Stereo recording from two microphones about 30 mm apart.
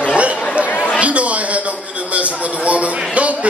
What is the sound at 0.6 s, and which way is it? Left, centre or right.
Chatter, left.